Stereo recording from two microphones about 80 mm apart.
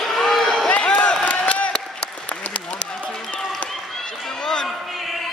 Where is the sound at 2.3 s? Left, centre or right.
Centre.